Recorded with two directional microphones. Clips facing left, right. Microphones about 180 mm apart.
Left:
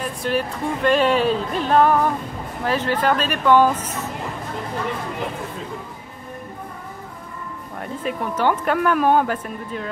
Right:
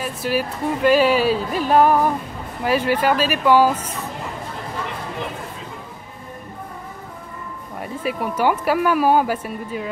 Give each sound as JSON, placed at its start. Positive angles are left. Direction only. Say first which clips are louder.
{"t": 0.0, "sound": "speech", "louder": "even", "side_deg": -5}
{"t": 7.8, "sound": "speech", "louder": "right 1 dB", "side_deg": -5}